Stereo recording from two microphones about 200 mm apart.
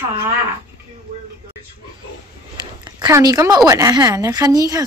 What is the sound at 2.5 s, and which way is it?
Speech, 20° right (ahead or behind).